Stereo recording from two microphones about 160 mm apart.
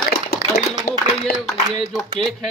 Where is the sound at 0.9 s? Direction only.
75° left (ahead or behind).